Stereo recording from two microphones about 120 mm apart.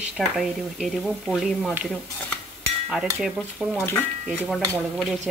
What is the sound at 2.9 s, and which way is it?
Speech, 5° right (ahead or behind).